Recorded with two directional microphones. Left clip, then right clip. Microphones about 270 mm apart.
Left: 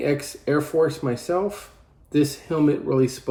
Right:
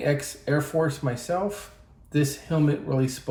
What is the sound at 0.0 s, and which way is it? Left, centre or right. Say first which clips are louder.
Speech: left 2 dB; left.